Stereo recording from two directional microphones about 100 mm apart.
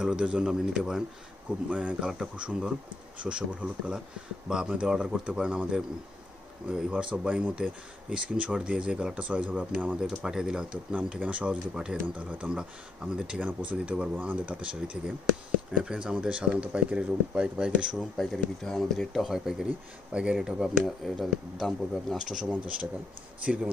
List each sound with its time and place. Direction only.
0.0 s speech: 10° right (ahead or behind)
7.2 s speech: 10° right (ahead or behind)
10.2 s speech: 5° right (ahead or behind)